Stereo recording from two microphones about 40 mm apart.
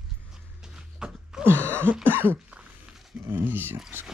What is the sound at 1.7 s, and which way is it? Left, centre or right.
Cough, right.